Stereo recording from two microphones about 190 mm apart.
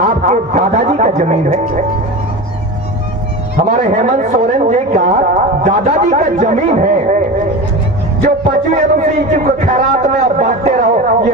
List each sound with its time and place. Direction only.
0.0 s speech: 45° right (ahead or behind)
3.7 s speech: 45° right (ahead or behind)
8.7 s speech: 45° right (ahead or behind)